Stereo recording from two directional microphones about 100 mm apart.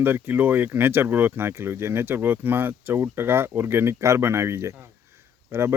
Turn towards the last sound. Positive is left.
turn(degrees=-25)  # may be behind; listen again after turning